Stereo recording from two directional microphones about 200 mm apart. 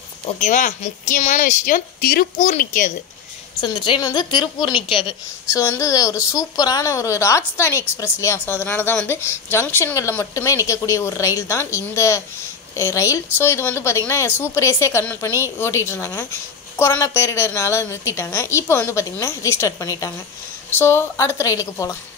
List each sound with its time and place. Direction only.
0.4 s speech: 40° left (ahead or behind)
3.6 s a woman's voice: 25° left (ahead or behind)